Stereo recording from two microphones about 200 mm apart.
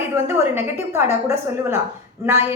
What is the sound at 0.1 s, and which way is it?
Speech, 10° right (ahead or behind).